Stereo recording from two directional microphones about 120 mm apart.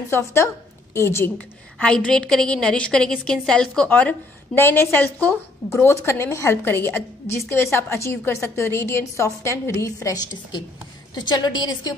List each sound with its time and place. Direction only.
0.1 s a woman's voice: 25° left (ahead or behind)
1.8 s a woman's voice: 10° left (ahead or behind); by 11.9 s 35° left (ahead or behind)